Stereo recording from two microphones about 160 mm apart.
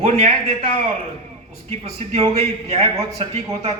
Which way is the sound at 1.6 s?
40° right (ahead or behind).